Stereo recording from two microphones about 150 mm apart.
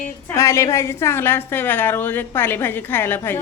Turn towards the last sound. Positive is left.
turn(degrees=15)  # may be behind; listen again after turning